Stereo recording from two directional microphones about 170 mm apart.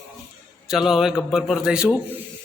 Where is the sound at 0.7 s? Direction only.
Centre (ahead or behind).